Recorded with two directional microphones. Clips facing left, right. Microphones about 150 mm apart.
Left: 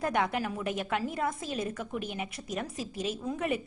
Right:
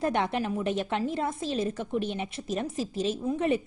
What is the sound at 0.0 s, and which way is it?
A woman's voice, 25° right (ahead or behind).